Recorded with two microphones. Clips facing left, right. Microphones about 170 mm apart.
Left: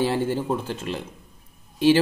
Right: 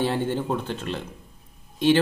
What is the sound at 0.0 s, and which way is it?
Speech, 10° left (ahead or behind).